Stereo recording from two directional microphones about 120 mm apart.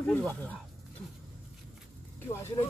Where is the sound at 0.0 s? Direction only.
10° left (ahead or behind).